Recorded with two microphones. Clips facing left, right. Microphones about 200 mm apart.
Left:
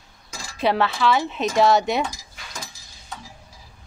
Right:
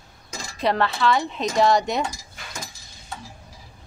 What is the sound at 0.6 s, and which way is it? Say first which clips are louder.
A woman's voice: left 1 dB; 5° left (ahead or behind).